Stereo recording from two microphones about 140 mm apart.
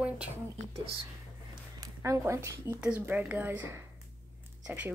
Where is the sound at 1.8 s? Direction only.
20° right (ahead or behind).